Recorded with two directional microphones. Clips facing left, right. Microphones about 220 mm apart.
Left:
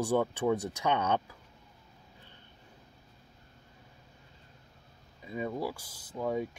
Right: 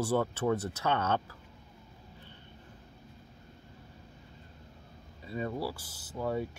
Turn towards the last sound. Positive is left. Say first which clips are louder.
# left 1 dB
turn(degrees=10)  # may be behind; listen again after turning